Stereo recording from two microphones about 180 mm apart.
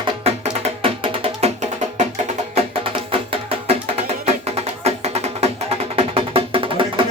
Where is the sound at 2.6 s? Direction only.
30° right (ahead or behind).